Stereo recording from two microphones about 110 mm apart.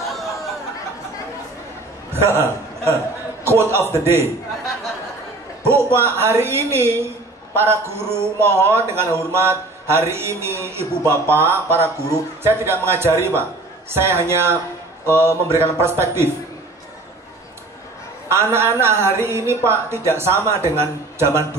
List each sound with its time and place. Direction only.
2.1 s a man's voice: 20° right (ahead or behind)
5.7 s a man's voice: 20° right (ahead or behind)
18.3 s a man's voice: 25° right (ahead or behind)